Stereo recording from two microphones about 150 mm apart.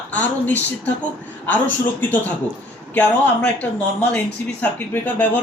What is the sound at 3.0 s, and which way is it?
Speech, 10° left (ahead or behind).